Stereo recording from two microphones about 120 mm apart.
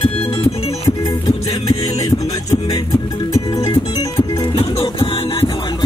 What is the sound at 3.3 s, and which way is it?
Music, 30° left (ahead or behind).